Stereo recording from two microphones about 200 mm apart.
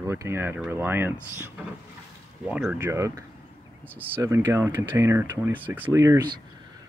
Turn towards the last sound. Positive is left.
turn(degrees=-15)  # may be behind; listen again after turning